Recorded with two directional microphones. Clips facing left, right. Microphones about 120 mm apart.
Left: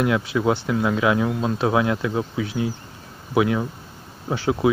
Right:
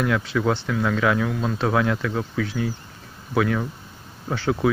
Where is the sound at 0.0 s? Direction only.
15° left (ahead or behind).